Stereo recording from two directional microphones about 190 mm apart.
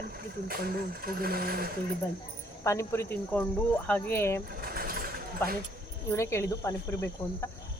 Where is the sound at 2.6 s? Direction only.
15° left (ahead or behind).